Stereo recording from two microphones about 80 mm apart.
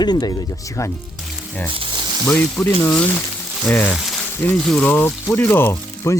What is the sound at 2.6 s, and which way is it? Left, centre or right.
Speech, centre.